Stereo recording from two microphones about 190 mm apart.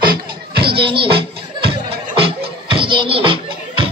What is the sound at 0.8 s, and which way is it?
Music, 30° right (ahead or behind).